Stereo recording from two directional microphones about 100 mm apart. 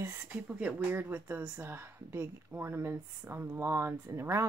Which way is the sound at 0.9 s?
20° right (ahead or behind).